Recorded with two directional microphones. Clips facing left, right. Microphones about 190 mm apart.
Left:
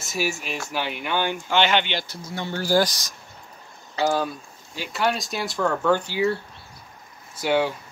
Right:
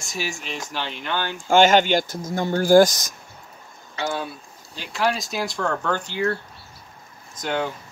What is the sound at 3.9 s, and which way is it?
Speech, 40° left (ahead or behind).